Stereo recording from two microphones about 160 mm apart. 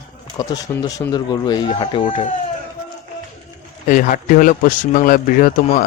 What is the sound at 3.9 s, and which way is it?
Speech, 55° left (ahead or behind).